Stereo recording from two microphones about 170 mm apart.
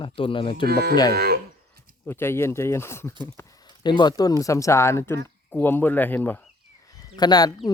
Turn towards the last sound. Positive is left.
turn(degrees=25)  # may be behind; listen again after turning